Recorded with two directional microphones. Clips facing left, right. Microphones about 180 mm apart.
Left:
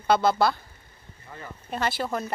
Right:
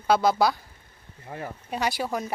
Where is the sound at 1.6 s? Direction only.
10° right (ahead or behind).